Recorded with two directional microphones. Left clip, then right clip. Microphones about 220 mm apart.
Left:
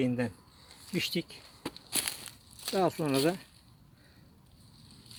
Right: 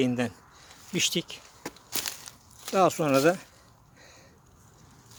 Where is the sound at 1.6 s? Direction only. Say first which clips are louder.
Right 1 dB; 30° left (ahead or behind).